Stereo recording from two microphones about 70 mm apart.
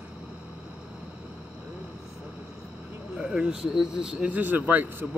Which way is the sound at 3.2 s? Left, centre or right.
Centre.